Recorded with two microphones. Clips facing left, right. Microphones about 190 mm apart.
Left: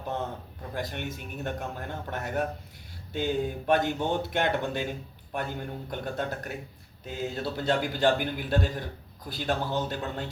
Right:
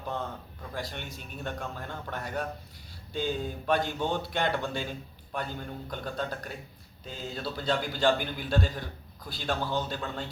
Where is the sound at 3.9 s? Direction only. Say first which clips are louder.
Left 2 dB; 15° left (ahead or behind).